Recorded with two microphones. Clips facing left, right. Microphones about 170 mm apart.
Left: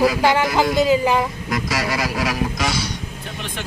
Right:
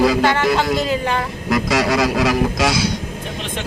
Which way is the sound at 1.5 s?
70° right (ahead or behind).